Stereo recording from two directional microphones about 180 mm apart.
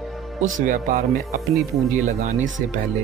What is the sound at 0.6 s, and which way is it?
Speech, 50° right (ahead or behind).